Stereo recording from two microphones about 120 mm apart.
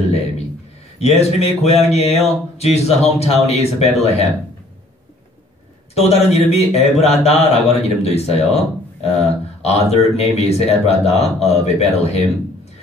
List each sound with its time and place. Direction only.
0.9 s speech: 60° left (ahead or behind)
5.9 s speech: 60° left (ahead or behind)
9.6 s speech: 60° left (ahead or behind)